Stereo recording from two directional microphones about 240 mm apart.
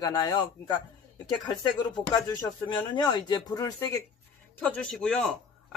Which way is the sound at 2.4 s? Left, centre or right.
Centre.